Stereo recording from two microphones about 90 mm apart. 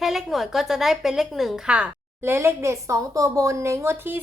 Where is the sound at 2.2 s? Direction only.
25° right (ahead or behind).